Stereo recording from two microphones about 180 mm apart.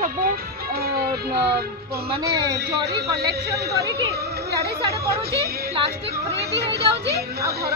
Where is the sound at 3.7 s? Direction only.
65° right (ahead or behind).